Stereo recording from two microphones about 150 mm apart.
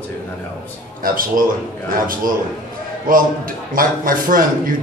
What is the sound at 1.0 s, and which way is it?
A man's voice, 70° right (ahead or behind).